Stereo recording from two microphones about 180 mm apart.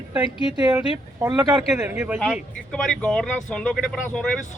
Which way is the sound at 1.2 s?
15° right (ahead or behind).